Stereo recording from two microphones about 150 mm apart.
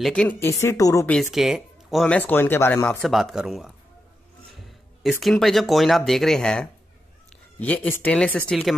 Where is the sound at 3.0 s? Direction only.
Centre (ahead or behind).